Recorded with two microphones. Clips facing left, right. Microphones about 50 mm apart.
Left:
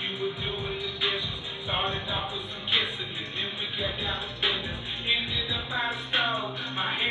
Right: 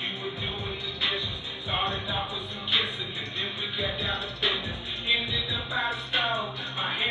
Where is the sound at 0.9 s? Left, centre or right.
Left.